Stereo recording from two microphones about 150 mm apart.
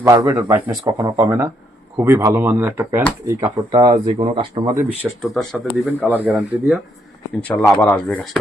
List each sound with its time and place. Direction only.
0.0 s speech: 20° right (ahead or behind)
5.2 s speech: centre (ahead or behind)
6.0 s speech: 10° right (ahead or behind)
7.4 s speech: 10° left (ahead or behind)